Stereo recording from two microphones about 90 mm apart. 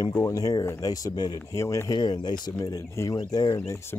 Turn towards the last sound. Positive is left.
turn(degrees=35)  # may be behind; listen again after turning